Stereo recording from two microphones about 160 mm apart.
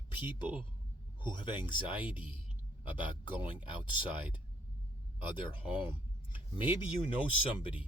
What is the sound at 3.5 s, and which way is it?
Speech, 30° left (ahead or behind).